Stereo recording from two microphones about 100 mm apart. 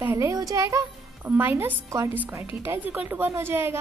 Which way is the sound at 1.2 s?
20° right (ahead or behind).